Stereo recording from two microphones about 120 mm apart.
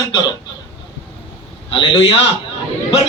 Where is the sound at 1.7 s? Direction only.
45° left (ahead or behind).